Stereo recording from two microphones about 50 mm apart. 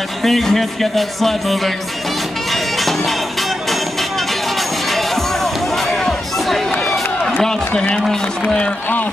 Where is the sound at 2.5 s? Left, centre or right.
Centre.